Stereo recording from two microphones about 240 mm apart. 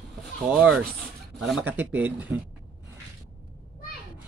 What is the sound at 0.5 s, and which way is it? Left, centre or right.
A man's voice, centre.